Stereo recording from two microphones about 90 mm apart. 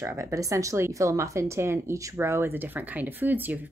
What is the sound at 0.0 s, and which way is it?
Speech, 35° right (ahead or behind).